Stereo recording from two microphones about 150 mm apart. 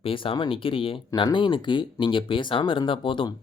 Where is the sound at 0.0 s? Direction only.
35° left (ahead or behind).